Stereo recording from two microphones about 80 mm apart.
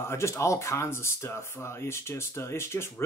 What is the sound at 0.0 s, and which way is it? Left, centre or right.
Speech, left.